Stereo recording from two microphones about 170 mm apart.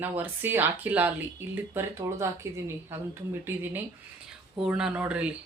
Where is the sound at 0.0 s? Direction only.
10° right (ahead or behind).